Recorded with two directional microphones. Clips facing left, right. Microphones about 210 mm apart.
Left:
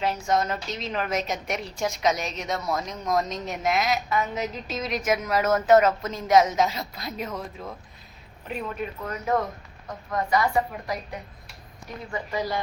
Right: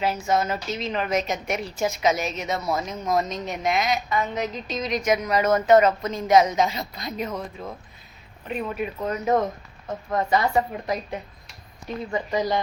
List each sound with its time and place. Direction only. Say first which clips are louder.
0.0 s a woman's voice: right 1 dB; 5° right (ahead or behind)
9.0 s a woman's voice: right 4 dB; 20° right (ahead or behind)